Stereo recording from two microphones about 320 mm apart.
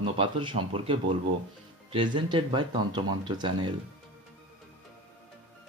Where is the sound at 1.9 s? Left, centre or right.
Centre.